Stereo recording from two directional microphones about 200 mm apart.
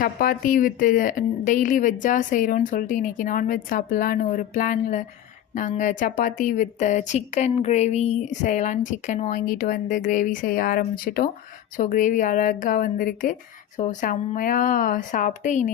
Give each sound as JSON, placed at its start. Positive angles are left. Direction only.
{"t": 0.0, "sound": "a woman's voice", "side_deg": 45}